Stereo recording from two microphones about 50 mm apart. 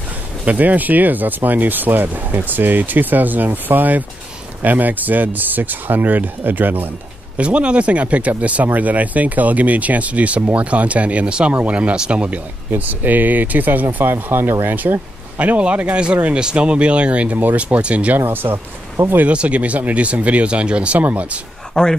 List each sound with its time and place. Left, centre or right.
0.5 s speech: right
7.3 s speech: right
12.7 s speech: right
14.8 s speech: right
18.1 s speech: right
19.2 s speech: right
21.8 s speech: centre